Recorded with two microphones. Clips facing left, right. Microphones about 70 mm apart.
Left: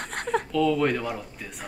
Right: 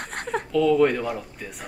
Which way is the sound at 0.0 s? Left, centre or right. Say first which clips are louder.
Left 1 dB; centre.